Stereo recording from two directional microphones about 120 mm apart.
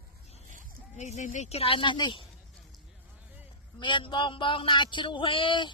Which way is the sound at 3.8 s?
40° left (ahead or behind).